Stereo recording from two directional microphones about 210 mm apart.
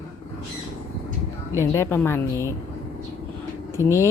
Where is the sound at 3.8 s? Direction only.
15° left (ahead or behind).